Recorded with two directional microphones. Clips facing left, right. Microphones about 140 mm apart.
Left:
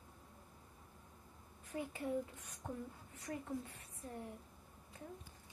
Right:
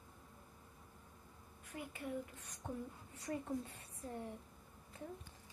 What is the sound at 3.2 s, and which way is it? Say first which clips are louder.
Speech: right 2 dB; 30° right (ahead or behind).